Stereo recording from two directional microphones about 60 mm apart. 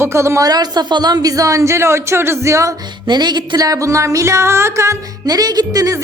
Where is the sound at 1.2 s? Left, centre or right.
Right.